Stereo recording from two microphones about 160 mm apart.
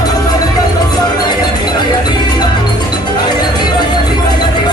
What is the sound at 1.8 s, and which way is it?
Cowbell, 25° left (ahead or behind).